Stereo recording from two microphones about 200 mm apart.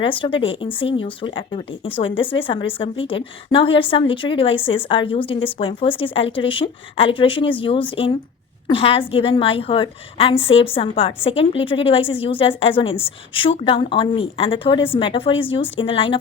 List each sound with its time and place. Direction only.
0.0 s speech: 25° left (ahead or behind)